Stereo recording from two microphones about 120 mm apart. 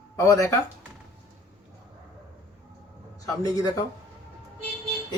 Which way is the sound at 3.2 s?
30° left (ahead or behind).